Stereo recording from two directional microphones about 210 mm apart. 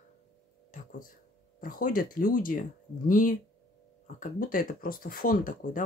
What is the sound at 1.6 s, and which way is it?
Speech, 40° left (ahead or behind).